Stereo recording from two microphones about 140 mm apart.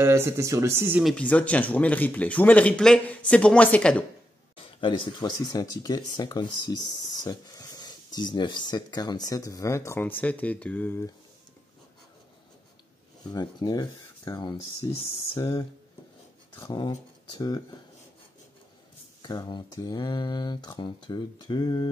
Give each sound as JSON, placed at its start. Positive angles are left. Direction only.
{"t": 0.0, "sound": "speech", "side_deg": -20}
{"t": 1.0, "sound": "speech", "side_deg": 10}
{"t": 4.6, "sound": "speech", "side_deg": 40}
{"t": 13.2, "sound": "speech", "side_deg": 30}
{"t": 14.8, "sound": "speech", "side_deg": 20}
{"t": 16.6, "sound": "speech", "side_deg": 30}
{"t": 19.2, "sound": "speech", "side_deg": 30}